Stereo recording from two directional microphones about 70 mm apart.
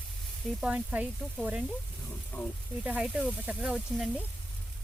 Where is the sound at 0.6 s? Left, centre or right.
Centre.